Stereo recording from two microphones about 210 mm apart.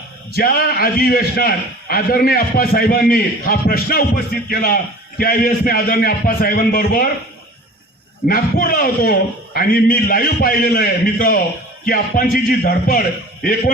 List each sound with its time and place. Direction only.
0.3 s a man's voice: 45° left (ahead or behind)
8.3 s a man's voice: 45° left (ahead or behind)